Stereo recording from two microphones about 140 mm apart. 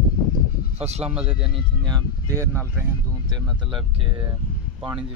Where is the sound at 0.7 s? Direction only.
50° right (ahead or behind).